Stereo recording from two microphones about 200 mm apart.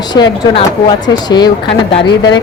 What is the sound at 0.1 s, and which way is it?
Speech, 20° left (ahead or behind).